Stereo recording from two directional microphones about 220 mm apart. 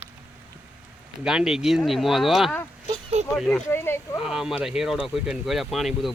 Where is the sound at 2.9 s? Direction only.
25° right (ahead or behind).